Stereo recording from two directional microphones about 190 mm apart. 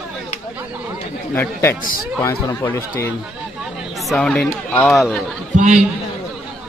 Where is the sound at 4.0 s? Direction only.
Centre (ahead or behind).